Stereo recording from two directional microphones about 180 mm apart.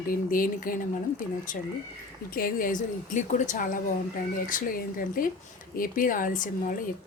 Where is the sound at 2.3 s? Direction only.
55° left (ahead or behind).